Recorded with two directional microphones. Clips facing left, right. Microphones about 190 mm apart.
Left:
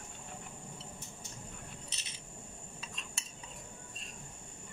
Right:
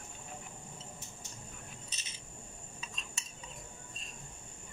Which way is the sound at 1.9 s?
65° left (ahead or behind).